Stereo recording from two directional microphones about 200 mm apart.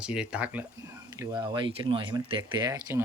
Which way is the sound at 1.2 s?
20° right (ahead or behind).